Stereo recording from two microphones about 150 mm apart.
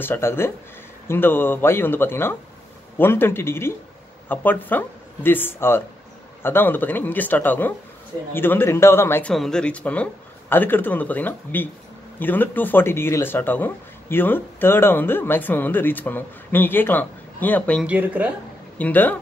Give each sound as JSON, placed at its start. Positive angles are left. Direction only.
{"t": 0.0, "sound": "speech", "side_deg": 15}
{"t": 9.3, "sound": "speech", "side_deg": 5}
{"t": 17.8, "sound": "speech", "side_deg": -10}
{"t": 18.8, "sound": "speech", "side_deg": 10}